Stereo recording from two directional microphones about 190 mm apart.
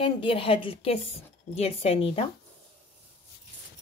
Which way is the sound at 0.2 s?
30° left (ahead or behind).